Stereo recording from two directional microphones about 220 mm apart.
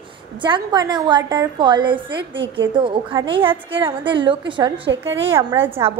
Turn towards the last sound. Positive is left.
turn(degrees=-10)  # may be behind; listen again after turning